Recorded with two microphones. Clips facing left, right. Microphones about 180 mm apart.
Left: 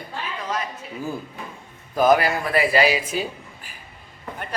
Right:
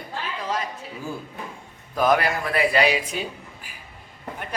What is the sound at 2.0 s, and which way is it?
Speech, centre (ahead or behind).